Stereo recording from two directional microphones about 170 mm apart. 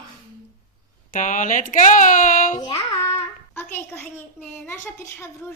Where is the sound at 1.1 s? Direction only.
50° left (ahead or behind).